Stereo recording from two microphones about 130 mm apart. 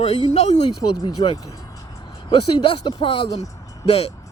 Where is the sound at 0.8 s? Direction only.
35° left (ahead or behind).